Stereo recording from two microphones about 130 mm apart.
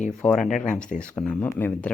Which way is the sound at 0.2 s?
10° left (ahead or behind).